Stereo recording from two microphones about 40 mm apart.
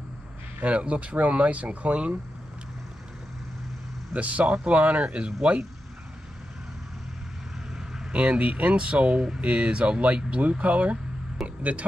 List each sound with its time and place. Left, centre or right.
0.7 s speech: right
4.1 s speech: right
7.7 s vehicle: centre
8.1 s speech: right